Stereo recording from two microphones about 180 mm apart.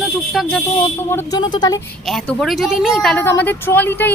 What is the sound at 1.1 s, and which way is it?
Speech, 15° left (ahead or behind).